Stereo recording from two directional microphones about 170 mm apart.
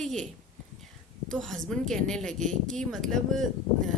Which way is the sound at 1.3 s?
5° left (ahead or behind).